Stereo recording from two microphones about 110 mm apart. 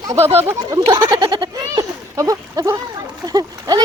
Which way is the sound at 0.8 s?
40° right (ahead or behind).